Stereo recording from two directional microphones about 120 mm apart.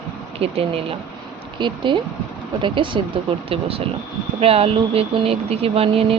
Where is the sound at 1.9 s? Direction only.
40° right (ahead or behind).